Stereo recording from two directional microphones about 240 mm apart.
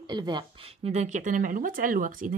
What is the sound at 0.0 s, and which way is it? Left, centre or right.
Speech, centre.